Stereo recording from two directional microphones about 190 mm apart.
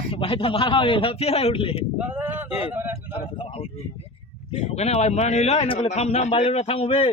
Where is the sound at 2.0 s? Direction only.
10° right (ahead or behind).